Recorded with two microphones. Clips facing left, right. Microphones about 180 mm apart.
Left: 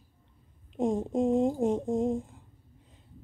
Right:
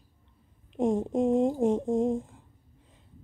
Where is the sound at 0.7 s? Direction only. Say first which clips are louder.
Right 2 dB; 25° right (ahead or behind).